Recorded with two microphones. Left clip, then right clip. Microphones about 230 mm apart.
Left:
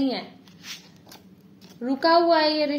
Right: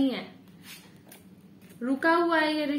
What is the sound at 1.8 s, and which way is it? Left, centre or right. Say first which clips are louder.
Speech: left 5 dB; centre.